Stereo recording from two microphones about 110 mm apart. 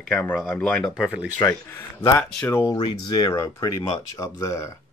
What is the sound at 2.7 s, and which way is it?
Speech, 40° left (ahead or behind).